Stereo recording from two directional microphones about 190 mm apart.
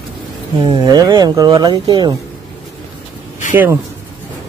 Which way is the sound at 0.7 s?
20° right (ahead or behind).